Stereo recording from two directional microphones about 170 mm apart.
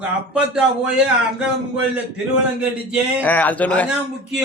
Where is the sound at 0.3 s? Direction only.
5° right (ahead or behind).